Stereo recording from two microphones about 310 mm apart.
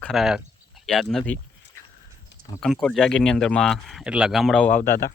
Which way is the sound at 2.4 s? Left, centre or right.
Centre.